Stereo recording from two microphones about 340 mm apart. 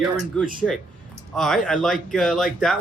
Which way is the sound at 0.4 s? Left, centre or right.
Centre.